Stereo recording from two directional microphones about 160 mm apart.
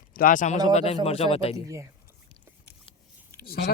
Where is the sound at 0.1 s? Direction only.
65° left (ahead or behind).